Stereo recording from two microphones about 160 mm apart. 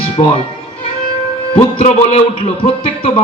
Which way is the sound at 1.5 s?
35° left (ahead or behind).